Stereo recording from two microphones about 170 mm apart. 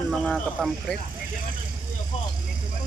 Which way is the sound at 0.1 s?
Centre (ahead or behind).